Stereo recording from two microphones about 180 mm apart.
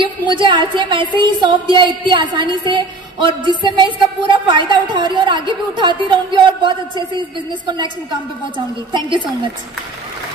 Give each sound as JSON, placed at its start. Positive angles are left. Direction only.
{"t": 0.0, "sound": "music", "side_deg": -25}
{"t": 8.9, "sound": "music", "side_deg": -25}